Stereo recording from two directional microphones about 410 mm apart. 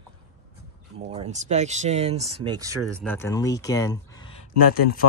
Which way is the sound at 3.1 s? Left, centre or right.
Centre.